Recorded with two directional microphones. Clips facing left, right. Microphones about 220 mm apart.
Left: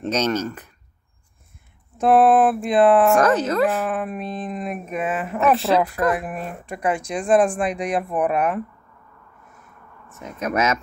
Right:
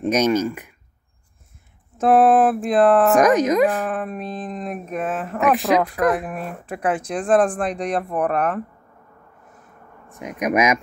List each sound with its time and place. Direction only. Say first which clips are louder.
0.0 s speech: right 4 dB; 10° right (ahead or behind)
2.0 s speech: even; 5° right (ahead or behind)
3.2 s speech: right 3 dB; 15° right (ahead or behind)
3.8 s speech: even; 5° left (ahead or behind)
5.4 s speech: even; 15° right (ahead or behind)
6.1 s speech: right 1 dB; centre (ahead or behind)
10.1 s speech: right 3 dB; 15° right (ahead or behind)